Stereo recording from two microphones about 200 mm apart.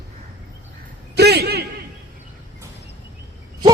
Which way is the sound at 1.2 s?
55° right (ahead or behind).